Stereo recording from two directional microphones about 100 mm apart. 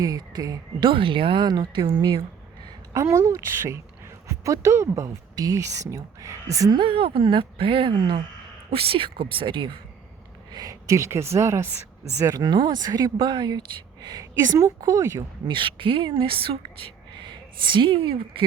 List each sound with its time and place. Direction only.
0.0 s a woman's voice: 40° right (ahead or behind)
0.9 s a woman's voice: 55° right (ahead or behind)
2.9 s a woman's voice: 30° right (ahead or behind)
6.7 s a woman's voice: 60° right (ahead or behind)
10.5 s a woman's voice: 40° right (ahead or behind)
12.5 s a woman's voice: 50° right (ahead or behind)
15.5 s speech: 55° right (ahead or behind)